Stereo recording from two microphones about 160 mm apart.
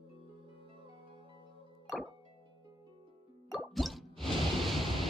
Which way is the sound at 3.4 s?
Centre (ahead or behind).